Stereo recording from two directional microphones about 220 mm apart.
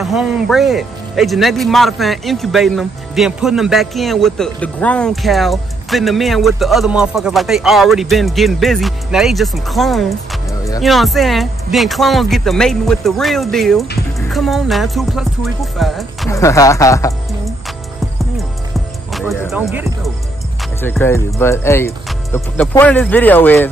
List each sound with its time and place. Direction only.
0.0 s speech: centre (ahead or behind)
16.3 s speech: 15° left (ahead or behind)
19.7 s speech: 10° right (ahead or behind)
20.8 s speech: 10° left (ahead or behind)